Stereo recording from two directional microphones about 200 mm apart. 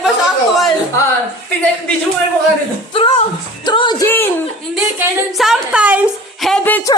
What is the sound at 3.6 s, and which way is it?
Music, 25° left (ahead or behind).